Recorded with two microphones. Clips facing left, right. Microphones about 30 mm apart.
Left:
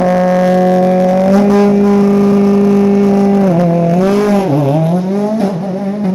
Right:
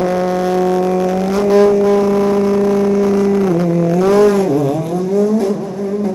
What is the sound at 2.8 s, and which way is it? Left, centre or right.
Vehicle, left.